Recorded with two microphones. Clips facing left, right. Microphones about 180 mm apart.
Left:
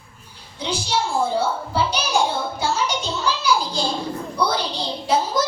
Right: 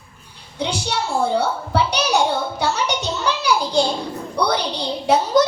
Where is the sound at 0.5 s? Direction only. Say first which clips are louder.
Even; 65° right (ahead or behind).